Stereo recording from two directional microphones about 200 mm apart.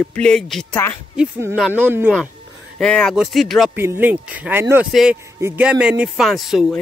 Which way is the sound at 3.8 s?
10° right (ahead or behind).